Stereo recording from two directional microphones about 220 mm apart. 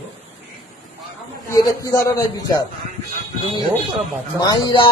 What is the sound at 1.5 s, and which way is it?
A man's voice, 15° left (ahead or behind).